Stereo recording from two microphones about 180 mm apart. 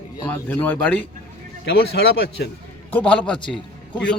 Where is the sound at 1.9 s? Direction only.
70° left (ahead or behind).